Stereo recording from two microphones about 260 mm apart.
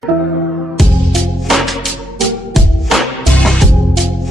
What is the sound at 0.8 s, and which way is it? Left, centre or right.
Music, centre.